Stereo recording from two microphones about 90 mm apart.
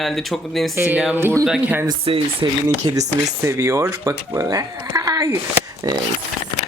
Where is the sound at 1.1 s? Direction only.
25° right (ahead or behind).